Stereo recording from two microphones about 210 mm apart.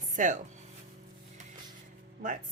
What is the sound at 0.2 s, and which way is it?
Speech, 35° right (ahead or behind).